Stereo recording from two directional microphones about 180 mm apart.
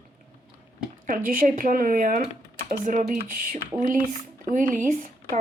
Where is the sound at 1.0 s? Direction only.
50° right (ahead or behind).